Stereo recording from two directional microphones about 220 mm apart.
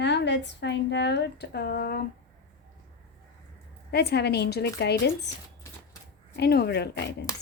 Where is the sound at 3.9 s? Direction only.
50° left (ahead or behind).